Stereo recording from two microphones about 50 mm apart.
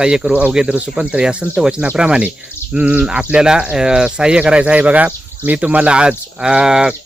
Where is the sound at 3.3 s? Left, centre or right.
Centre.